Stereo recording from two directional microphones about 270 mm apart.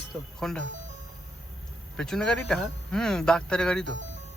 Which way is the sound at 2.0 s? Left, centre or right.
Centre.